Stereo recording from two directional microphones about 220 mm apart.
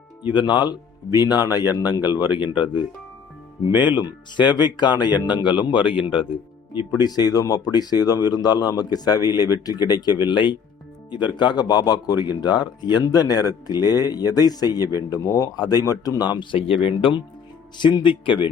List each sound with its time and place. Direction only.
0.3 s speech: 20° left (ahead or behind)